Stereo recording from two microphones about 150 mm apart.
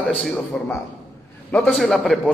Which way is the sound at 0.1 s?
5° left (ahead or behind).